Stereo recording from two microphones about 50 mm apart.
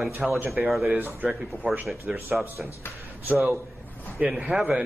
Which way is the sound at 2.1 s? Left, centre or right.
Centre.